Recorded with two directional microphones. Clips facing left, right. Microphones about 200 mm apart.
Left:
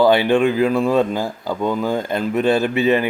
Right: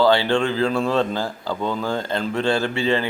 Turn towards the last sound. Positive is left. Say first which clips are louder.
# left 5 dB
turn(degrees=20)  # may be behind; listen again after turning